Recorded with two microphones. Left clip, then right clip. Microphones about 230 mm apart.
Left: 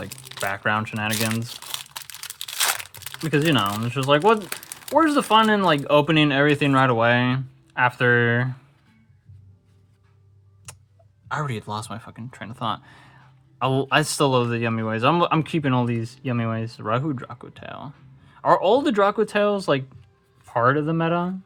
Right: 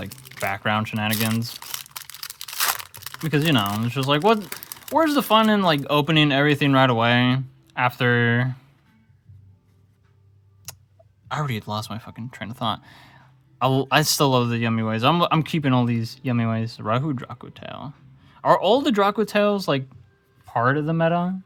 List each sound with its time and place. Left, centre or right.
0.3 s speech: right
2.5 s crumpling: centre
3.2 s speech: right
11.3 s speech: right